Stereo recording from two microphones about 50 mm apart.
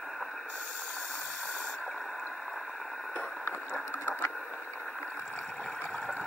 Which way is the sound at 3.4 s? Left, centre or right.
Left.